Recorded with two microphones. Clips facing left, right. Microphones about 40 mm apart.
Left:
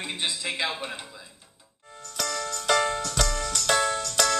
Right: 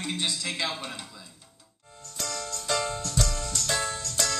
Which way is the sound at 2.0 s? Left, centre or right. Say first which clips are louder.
Left 5 dB; left.